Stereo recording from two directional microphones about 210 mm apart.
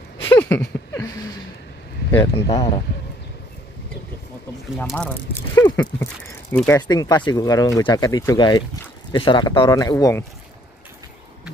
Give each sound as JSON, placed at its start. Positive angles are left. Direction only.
{"t": 0.3, "sound": "a sound", "side_deg": 10}
{"t": 2.3, "sound": "speech", "side_deg": 25}
{"t": 4.7, "sound": "speech", "side_deg": 5}
{"t": 5.6, "sound": "speech", "side_deg": 20}